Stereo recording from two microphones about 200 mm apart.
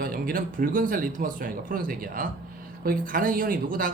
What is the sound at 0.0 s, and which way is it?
Speech, 45° right (ahead or behind).